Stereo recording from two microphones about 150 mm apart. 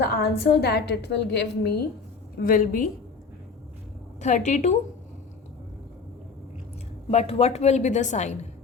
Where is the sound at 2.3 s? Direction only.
70° left (ahead or behind).